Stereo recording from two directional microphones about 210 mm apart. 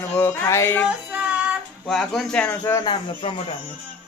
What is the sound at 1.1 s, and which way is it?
Child singing, 5° right (ahead or behind).